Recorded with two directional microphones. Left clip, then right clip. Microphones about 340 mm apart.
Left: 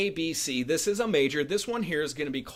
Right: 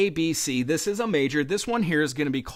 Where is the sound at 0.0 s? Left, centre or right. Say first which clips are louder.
Right 5 dB; right.